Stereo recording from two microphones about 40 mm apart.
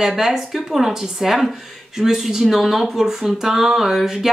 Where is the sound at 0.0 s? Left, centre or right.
Centre.